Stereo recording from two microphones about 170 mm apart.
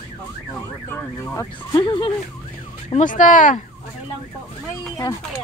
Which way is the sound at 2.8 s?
45° left (ahead or behind).